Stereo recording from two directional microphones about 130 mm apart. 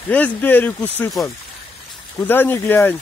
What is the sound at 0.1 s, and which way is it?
Speech, 15° left (ahead or behind).